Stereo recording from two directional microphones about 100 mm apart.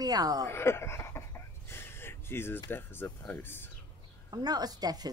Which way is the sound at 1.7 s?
25° left (ahead or behind).